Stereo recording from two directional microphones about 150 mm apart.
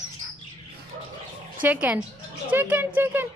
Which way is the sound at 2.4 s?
10° right (ahead or behind).